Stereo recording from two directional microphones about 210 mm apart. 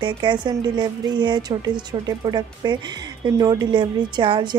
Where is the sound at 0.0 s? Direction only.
20° right (ahead or behind).